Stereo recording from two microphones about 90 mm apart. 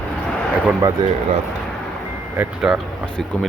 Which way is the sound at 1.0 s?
50° right (ahead or behind).